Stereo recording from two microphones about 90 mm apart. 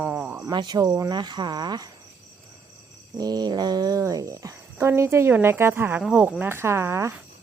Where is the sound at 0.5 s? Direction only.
50° right (ahead or behind).